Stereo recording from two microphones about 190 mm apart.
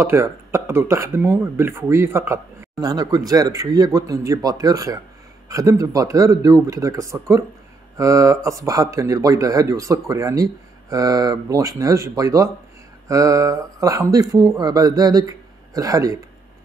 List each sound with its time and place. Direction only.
0.0 s speech: 15° right (ahead or behind)